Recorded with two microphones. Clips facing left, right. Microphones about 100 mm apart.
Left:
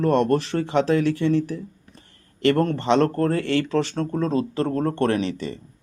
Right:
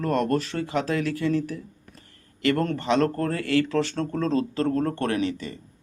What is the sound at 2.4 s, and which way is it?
A man's voice, 30° left (ahead or behind).